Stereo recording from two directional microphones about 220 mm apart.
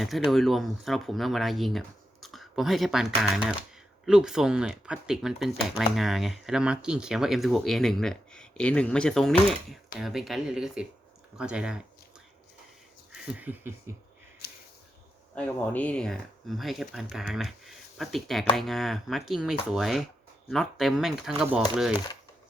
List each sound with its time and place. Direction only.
0.3 s speech: centre (ahead or behind)
13.1 s speech: 5° right (ahead or behind)
14.4 s a sound: 45° left (ahead or behind)
15.4 s speech: 5° left (ahead or behind)